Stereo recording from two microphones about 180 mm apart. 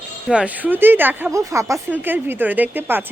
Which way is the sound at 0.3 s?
5° right (ahead or behind).